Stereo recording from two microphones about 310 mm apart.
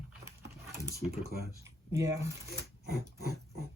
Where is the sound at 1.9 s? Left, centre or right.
Centre.